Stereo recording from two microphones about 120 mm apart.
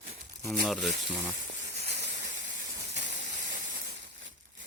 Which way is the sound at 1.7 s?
65° right (ahead or behind).